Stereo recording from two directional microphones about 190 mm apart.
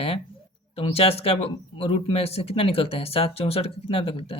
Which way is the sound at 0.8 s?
30° left (ahead or behind).